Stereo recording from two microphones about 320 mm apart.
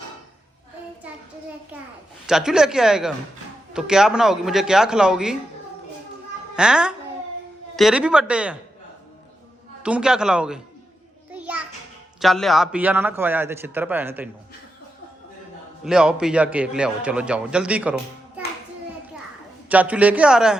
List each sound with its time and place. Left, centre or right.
2.2 s a man's voice: centre
6.6 s a man's voice: centre
9.8 s a man's voice: centre
11.3 s music: centre
12.2 s a man's voice: centre
15.8 s a man's voice: centre
19.6 s a man's voice: centre